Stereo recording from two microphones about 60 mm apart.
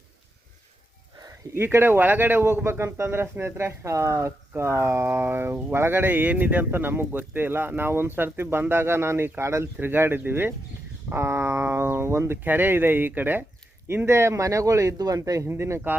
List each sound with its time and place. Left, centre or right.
1.5 s speech: right
9.8 s speech: right
12.4 s speech: right
15.4 s speech: right